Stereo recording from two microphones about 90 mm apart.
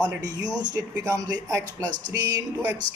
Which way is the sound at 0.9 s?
35° right (ahead or behind).